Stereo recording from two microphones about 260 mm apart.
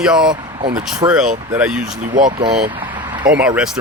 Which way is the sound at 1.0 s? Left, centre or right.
Centre.